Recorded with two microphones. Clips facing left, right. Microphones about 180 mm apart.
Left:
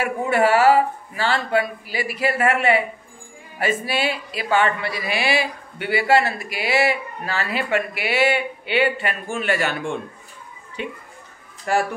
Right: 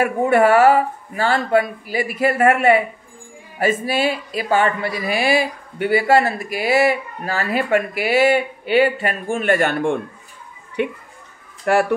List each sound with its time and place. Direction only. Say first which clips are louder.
0.0 s speech: right 4 dB; 50° right (ahead or behind)